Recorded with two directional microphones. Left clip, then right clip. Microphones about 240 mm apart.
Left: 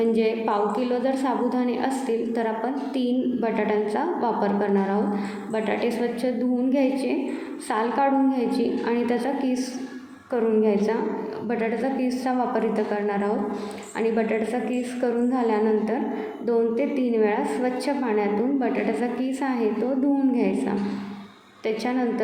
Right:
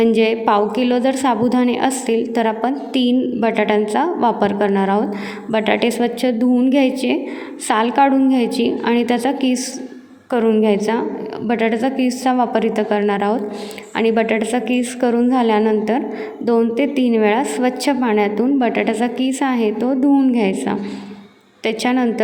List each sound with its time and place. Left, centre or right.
0.0 s a woman's voice: right